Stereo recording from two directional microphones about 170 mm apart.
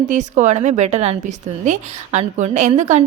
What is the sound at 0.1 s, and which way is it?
A woman's voice, 45° right (ahead or behind).